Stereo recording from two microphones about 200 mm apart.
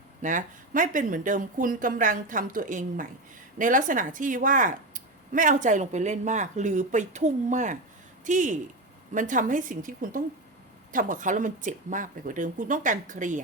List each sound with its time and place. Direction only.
0.2 s speech: 40° right (ahead or behind)